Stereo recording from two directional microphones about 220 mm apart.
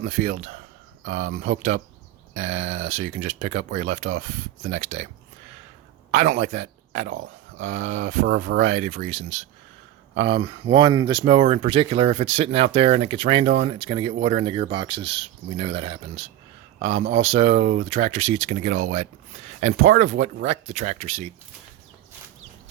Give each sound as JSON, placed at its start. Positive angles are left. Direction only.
{"t": 0.0, "sound": "speech", "side_deg": -35}
{"t": 6.1, "sound": "speech", "side_deg": -35}
{"t": 7.1, "sound": "speech", "side_deg": -60}
{"t": 7.7, "sound": "speech", "side_deg": -35}
{"t": 10.2, "sound": "speech", "side_deg": -25}